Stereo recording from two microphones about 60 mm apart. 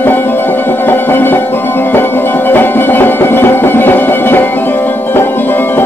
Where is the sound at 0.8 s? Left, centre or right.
Left.